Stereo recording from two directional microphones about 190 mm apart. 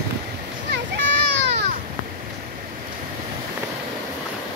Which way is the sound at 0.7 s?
65° right (ahead or behind).